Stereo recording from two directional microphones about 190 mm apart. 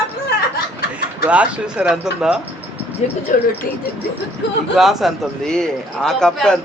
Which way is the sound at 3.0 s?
35° left (ahead or behind).